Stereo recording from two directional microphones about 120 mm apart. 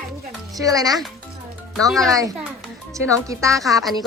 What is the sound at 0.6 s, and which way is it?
Speech, 30° right (ahead or behind).